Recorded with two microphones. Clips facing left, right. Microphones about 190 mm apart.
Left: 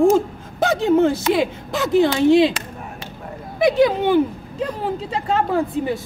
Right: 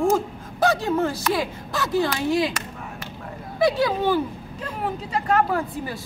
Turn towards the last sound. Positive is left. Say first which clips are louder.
# left 6 dB
turn(degrees=25)  # may be behind; listen again after turning